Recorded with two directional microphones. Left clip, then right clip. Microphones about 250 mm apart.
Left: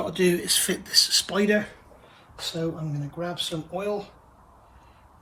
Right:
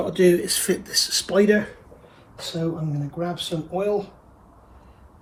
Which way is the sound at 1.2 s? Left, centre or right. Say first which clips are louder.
Right 5 dB; left.